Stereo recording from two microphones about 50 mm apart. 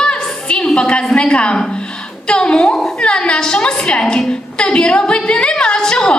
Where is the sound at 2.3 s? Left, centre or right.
Centre.